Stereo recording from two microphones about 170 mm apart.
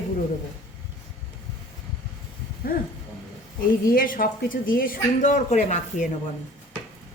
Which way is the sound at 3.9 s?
55° left (ahead or behind).